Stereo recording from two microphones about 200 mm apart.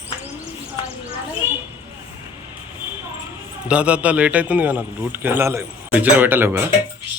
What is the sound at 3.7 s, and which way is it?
A man's voice, 5° right (ahead or behind).